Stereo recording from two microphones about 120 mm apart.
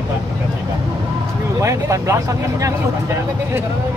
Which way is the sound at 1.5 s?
25° right (ahead or behind).